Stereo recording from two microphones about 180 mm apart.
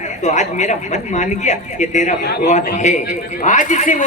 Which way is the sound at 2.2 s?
65° left (ahead or behind).